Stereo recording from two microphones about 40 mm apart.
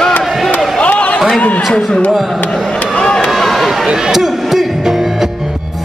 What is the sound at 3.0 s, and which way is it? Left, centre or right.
Run, centre.